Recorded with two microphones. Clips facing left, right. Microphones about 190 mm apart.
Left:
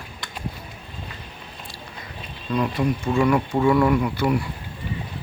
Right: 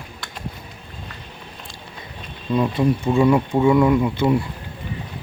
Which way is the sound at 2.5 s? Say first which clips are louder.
Right 4 dB; 25° right (ahead or behind).